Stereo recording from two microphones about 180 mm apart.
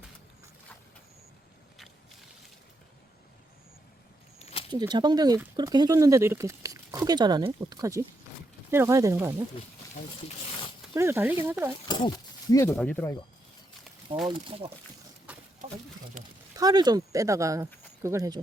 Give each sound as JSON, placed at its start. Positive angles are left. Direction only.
{"t": 4.4, "sound": "keys jangling", "side_deg": 35}
{"t": 4.7, "sound": "speech", "side_deg": -25}
{"t": 10.9, "sound": "speech", "side_deg": -15}
{"t": 11.9, "sound": "speech", "side_deg": 25}
{"t": 12.7, "sound": "speech", "side_deg": 10}
{"t": 14.3, "sound": "speech", "side_deg": -30}
{"t": 15.3, "sound": "a sound", "side_deg": -10}
{"t": 16.6, "sound": "speech", "side_deg": -20}